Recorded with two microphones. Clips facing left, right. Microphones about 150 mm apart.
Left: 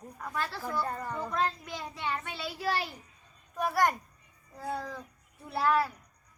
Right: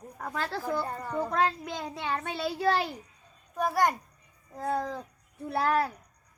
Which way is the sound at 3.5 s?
15° right (ahead or behind).